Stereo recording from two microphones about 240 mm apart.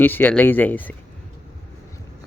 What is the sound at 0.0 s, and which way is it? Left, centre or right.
Speech, centre.